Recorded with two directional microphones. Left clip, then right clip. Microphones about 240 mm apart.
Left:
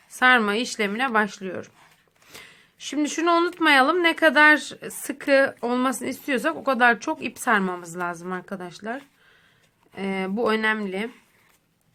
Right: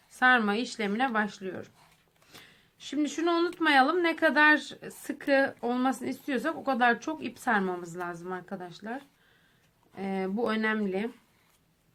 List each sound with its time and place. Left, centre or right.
0.2 s a woman's voice: left